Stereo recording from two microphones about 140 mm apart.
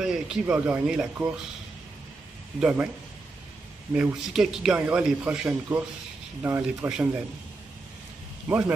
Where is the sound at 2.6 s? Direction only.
10° right (ahead or behind).